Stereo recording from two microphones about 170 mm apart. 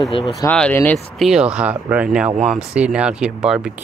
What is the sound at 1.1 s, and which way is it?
Speech, 5° right (ahead or behind).